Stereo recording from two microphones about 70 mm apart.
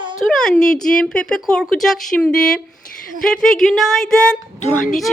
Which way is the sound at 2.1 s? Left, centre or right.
Centre.